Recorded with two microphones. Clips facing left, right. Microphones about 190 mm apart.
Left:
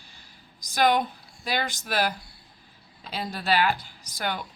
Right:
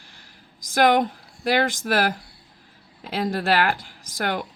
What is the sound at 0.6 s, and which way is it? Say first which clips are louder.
Speech: right 4 dB; 90° right.